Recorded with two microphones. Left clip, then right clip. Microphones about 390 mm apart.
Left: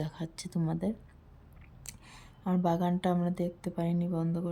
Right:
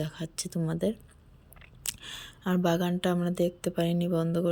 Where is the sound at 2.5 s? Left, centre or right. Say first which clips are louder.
Right 2 dB; centre.